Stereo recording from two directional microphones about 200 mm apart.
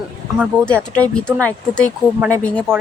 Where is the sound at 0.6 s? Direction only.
5° left (ahead or behind).